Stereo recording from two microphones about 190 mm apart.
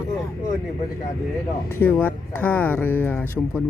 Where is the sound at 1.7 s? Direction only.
10° left (ahead or behind).